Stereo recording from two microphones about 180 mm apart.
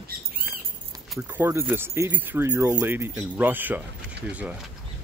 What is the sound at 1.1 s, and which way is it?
Speech, 5° right (ahead or behind).